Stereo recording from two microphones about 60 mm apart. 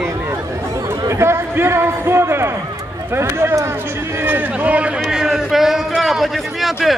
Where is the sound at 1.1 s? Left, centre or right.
Right.